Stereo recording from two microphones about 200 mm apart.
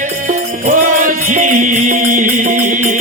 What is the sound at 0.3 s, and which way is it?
Music, 40° right (ahead or behind).